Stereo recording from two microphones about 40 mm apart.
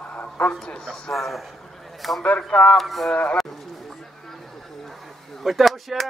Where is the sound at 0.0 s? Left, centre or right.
Left.